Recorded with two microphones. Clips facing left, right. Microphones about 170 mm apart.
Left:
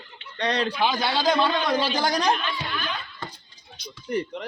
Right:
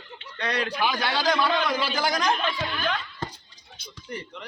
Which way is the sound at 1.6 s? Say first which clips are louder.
Left 3 dB; 35° left (ahead or behind).